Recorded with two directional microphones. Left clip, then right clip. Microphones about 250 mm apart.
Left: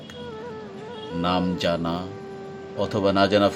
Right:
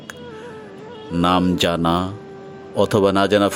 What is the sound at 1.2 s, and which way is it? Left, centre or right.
Speech, right.